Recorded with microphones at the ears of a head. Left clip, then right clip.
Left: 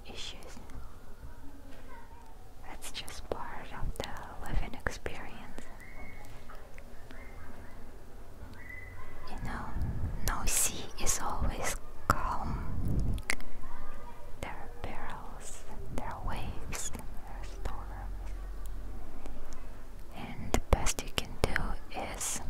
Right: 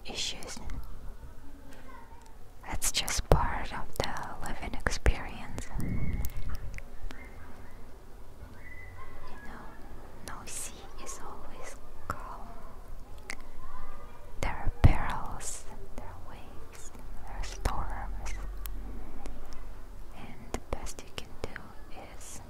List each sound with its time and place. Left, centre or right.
0.0 s whispering: right
2.6 s whispering: right
9.5 s whispering: left
14.4 s whispering: right
15.9 s whispering: left
17.4 s whispering: right
20.3 s whispering: left